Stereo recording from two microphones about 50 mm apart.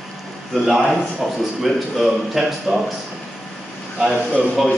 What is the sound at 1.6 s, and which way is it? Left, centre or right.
A man's voice, centre.